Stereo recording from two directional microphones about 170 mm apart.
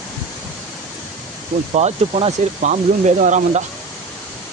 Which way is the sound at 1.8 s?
40° right (ahead or behind).